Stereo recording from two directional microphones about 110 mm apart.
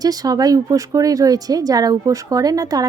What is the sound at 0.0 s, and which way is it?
A woman's voice, 35° right (ahead or behind).